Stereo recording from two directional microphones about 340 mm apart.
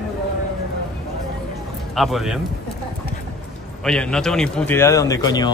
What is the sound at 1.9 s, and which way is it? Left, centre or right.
Speech, centre.